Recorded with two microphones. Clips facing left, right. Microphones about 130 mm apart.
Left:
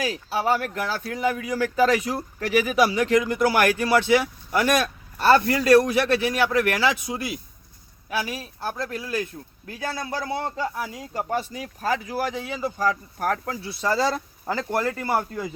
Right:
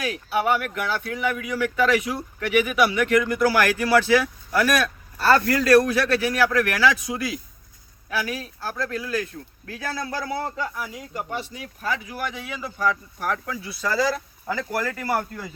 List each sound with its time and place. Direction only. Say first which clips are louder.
0.0 s a man's voice: right 1 dB; 35° left (ahead or behind)
10.2 s speech: left 1 dB; 25° left (ahead or behind)